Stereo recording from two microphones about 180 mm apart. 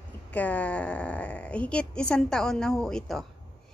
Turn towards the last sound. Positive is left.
turn(degrees=0)  # may be behind; listen again after turning